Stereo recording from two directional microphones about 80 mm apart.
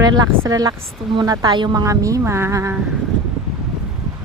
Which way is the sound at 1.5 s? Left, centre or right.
Right.